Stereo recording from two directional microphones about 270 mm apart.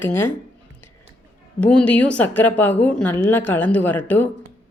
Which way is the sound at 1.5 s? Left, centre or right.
Centre.